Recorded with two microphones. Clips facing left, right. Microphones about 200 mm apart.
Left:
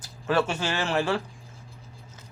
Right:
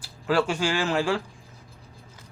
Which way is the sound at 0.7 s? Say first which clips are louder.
Right 2 dB; 20° left (ahead or behind).